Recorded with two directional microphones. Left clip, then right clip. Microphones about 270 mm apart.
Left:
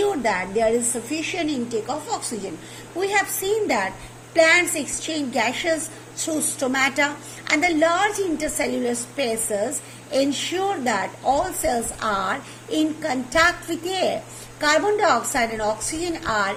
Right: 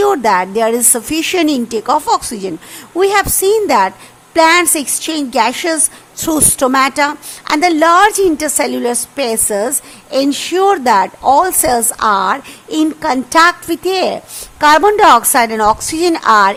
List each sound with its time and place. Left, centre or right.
0.0 s a woman's voice: right